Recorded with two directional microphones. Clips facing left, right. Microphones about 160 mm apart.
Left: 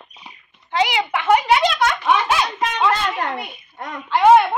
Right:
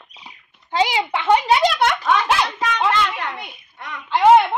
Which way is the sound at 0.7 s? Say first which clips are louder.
Even; 30° right (ahead or behind).